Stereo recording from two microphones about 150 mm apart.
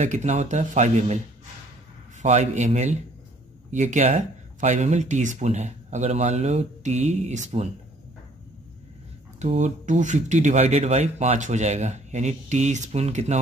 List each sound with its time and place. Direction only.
0.0 s speech: 50° right (ahead or behind)
2.2 s speech: 50° right (ahead or behind)
9.4 s speech: 50° right (ahead or behind)